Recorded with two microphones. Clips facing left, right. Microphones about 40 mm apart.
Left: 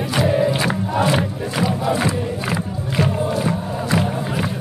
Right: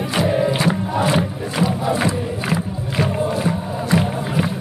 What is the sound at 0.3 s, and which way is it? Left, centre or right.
Crowd, centre.